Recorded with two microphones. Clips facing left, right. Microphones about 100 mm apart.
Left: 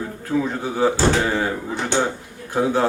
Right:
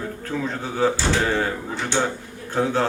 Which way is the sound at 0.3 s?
15° left (ahead or behind).